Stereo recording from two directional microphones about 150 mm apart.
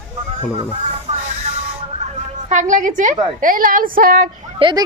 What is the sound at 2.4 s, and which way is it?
A woman's voice, 55° right (ahead or behind).